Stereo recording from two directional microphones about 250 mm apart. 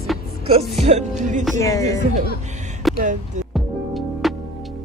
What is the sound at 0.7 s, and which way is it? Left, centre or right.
Music, right.